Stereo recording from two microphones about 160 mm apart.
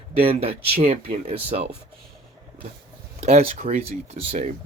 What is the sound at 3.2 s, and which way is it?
Speech, 40° right (ahead or behind).